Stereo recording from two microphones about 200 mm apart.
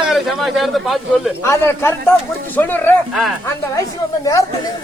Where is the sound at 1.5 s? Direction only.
10° left (ahead or behind).